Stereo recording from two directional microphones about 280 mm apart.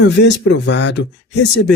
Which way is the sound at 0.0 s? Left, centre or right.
Left.